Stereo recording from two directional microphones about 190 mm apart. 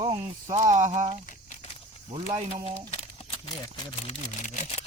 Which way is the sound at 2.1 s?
30° right (ahead or behind).